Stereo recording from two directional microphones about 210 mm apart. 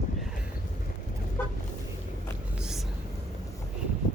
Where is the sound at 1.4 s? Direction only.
10° left (ahead or behind).